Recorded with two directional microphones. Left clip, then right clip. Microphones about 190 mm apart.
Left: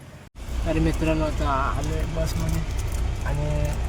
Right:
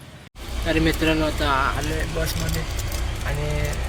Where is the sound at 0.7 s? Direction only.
5° left (ahead or behind).